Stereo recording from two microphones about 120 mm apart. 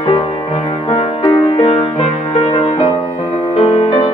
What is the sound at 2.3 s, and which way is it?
Music, 50° left (ahead or behind).